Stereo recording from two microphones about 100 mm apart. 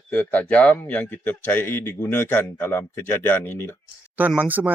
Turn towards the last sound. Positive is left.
turn(degrees=-15)  # may be behind; listen again after turning